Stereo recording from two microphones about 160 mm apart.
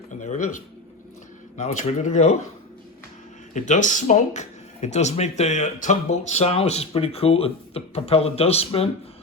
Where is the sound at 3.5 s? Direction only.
50° left (ahead or behind).